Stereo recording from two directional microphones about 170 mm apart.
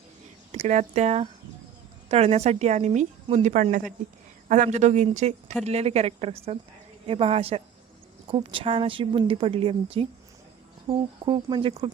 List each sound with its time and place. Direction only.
0.5 s a woman's voice: 40° right (ahead or behind); by 11.8 s 25° right (ahead or behind)